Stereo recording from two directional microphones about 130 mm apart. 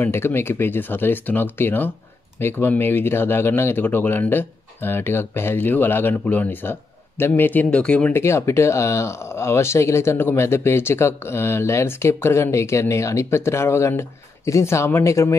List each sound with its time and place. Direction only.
0.0 s speech: 20° left (ahead or behind)
8.2 s speech: 20° left (ahead or behind)